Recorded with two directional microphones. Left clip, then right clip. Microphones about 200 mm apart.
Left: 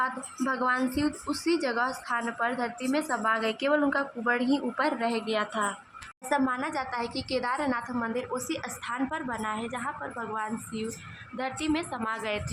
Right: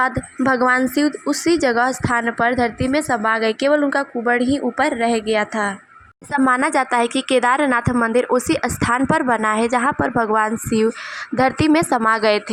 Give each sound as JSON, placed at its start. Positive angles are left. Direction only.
{"t": 0.0, "sound": "a woman's voice", "side_deg": -35}
{"t": 6.3, "sound": "a woman's voice", "side_deg": -35}